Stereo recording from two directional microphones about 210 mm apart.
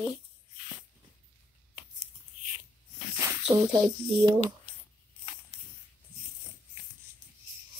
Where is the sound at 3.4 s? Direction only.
20° right (ahead or behind).